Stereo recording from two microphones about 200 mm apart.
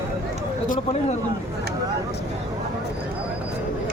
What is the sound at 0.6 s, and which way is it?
Speech, 40° left (ahead or behind).